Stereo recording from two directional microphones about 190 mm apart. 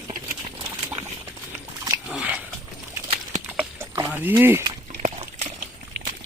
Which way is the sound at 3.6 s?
15° right (ahead or behind).